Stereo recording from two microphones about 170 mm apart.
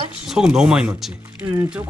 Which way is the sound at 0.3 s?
5° right (ahead or behind).